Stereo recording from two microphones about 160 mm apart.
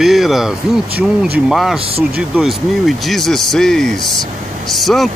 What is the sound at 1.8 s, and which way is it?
Speech, 35° right (ahead or behind).